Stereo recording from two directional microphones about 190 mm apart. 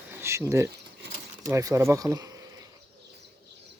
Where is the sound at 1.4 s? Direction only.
15° right (ahead or behind).